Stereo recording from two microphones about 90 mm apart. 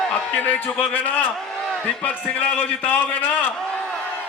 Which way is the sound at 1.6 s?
5° left (ahead or behind).